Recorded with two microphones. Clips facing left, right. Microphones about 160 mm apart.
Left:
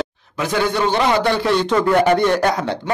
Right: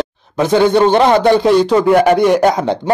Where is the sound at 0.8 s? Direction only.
55° right (ahead or behind).